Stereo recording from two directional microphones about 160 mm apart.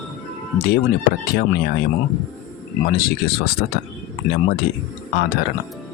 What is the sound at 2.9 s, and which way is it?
Speech, 70° left (ahead or behind).